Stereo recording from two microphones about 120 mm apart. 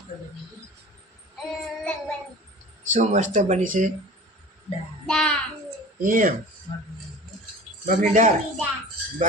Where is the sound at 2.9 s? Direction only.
90° right.